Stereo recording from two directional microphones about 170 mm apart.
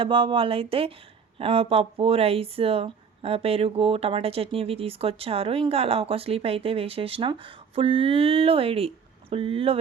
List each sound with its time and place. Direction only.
0.0 s speech: 30° right (ahead or behind)